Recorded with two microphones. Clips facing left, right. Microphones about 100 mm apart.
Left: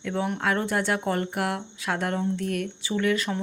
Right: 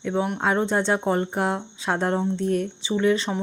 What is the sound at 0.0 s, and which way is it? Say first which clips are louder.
Speech: right 3 dB; 20° right (ahead or behind).